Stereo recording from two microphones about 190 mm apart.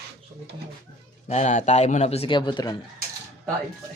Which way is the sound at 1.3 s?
40° left (ahead or behind).